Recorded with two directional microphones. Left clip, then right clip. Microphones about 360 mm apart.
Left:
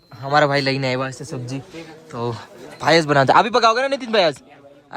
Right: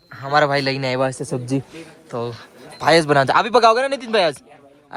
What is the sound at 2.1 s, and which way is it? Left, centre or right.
Speech, centre.